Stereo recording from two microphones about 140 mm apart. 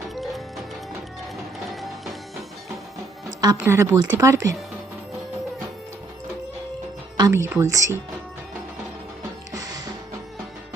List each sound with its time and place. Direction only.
0.2 s music: centre (ahead or behind)
1.7 s music: centre (ahead or behind)
3.2 s music: 25° right (ahead or behind)
3.6 s speech: 20° right (ahead or behind)
7.2 s speech: 20° right (ahead or behind)
9.6 s music: 25° right (ahead or behind)